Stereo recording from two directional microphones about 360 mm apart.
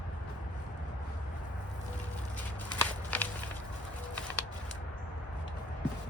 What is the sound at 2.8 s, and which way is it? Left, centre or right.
Walk, centre.